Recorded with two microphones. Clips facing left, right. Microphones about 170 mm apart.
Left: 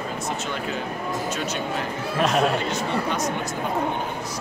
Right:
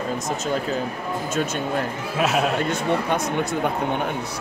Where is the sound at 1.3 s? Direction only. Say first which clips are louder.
Right 4 dB; 50° right (ahead or behind).